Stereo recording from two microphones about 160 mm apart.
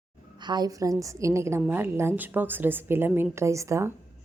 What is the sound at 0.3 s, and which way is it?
A woman's voice, 25° right (ahead or behind).